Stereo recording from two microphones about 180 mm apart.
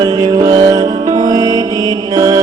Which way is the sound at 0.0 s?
20° right (ahead or behind).